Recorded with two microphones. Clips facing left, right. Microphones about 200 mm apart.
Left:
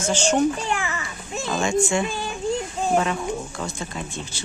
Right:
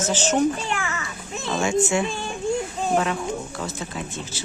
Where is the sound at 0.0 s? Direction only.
5° right (ahead or behind).